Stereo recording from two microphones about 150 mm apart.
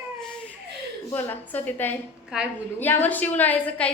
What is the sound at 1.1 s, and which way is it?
Speech, 15° left (ahead or behind).